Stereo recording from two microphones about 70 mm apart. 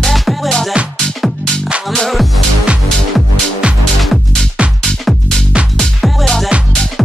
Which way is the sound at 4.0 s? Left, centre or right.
Centre.